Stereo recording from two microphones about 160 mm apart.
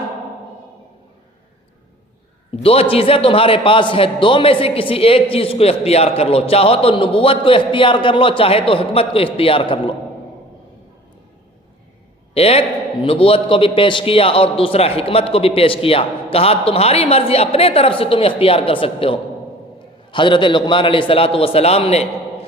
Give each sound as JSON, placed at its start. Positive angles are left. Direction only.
{"t": 2.6, "sound": "a man's voice", "side_deg": 35}
{"t": 12.3, "sound": "a man's voice", "side_deg": 40}